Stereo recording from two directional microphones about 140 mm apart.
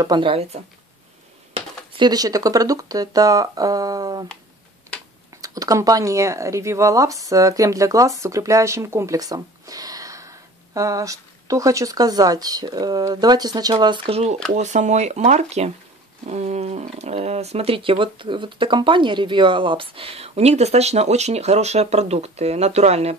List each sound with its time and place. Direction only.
0.0 s speech: 35° right (ahead or behind)
5.4 s speech: 25° right (ahead or behind); by 14.3 s 45° right (ahead or behind)
14.5 s speech: 60° right (ahead or behind)